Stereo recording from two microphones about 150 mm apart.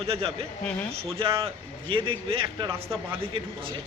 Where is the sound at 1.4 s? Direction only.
35° right (ahead or behind).